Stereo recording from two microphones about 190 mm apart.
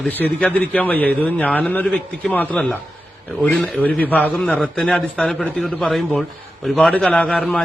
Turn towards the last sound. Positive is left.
turn(degrees=5)  # may be behind; listen again after turning